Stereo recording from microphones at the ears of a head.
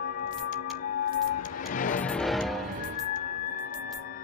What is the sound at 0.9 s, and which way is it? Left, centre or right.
Music, left.